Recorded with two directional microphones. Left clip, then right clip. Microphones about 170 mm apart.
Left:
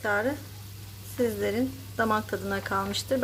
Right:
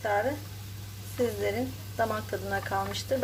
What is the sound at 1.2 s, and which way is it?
Speech, 25° left (ahead or behind).